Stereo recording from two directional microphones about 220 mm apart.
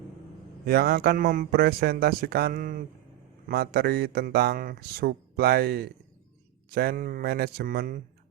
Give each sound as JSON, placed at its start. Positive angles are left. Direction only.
{"t": 0.6, "sound": "speech", "side_deg": -45}